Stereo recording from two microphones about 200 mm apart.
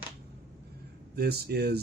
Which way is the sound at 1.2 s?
50° right (ahead or behind).